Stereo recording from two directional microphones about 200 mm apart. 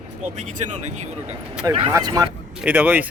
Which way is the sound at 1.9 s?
20° right (ahead or behind).